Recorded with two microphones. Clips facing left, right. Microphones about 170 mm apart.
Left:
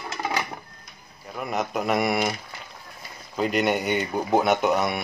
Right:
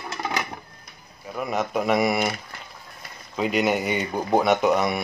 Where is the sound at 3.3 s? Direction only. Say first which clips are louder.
Right 1 dB; centre (ahead or behind).